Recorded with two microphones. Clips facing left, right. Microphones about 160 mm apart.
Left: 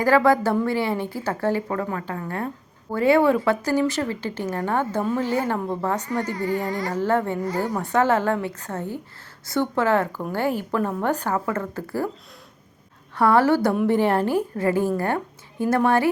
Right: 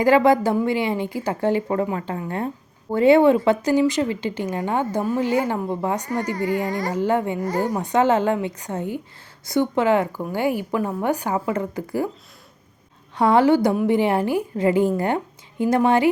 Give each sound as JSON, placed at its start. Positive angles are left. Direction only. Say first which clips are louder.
{"t": 0.0, "sound": "a woman's voice", "louder": "right 2 dB", "side_deg": -20}
{"t": 13.1, "sound": "a woman's voice", "louder": "right 2 dB", "side_deg": -20}